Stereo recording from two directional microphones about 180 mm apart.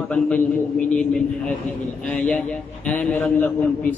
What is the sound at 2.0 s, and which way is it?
A man's voice, 5° left (ahead or behind).